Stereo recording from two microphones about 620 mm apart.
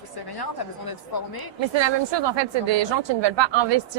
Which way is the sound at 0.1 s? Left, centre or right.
Left.